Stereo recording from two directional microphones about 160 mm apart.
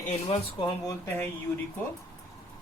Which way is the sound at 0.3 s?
35° left (ahead or behind).